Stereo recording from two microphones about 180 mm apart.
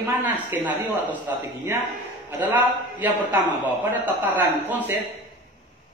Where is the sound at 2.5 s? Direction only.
10° right (ahead or behind).